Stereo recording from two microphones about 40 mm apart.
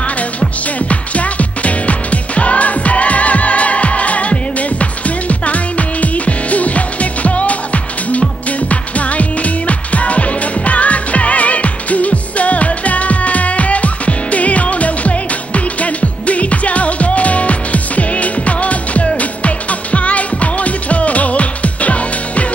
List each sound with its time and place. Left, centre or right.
0.7 s music: left